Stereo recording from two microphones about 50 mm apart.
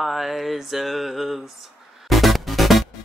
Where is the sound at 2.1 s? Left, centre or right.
Centre.